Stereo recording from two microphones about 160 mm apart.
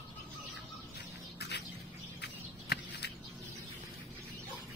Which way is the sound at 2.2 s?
90° left.